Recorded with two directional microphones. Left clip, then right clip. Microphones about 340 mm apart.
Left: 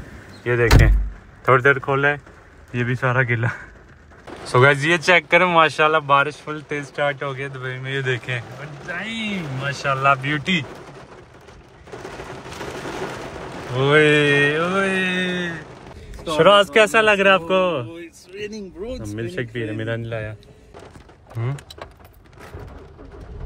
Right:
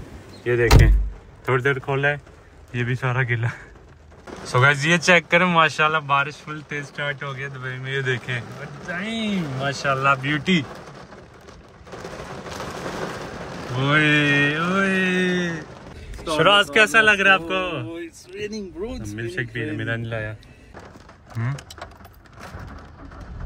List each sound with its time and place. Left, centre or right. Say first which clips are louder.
0.0 s door: left 1 dB; centre
1.4 s speech: left 6 dB; centre
13.7 s speech: left 4 dB; centre
16.3 s a man's voice: left 3 dB; centre
17.8 s a sound: right 3 dB; centre
18.8 s speech: left 2 dB; centre
19.0 s a man's voice: left 1 dB; left